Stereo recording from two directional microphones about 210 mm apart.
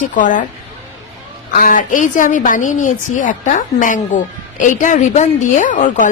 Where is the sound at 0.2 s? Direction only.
35° left (ahead or behind).